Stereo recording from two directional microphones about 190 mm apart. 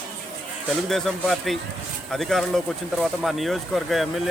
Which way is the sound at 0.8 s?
Centre (ahead or behind).